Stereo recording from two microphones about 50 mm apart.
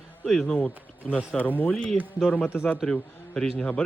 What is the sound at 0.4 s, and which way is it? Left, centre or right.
Speech, centre.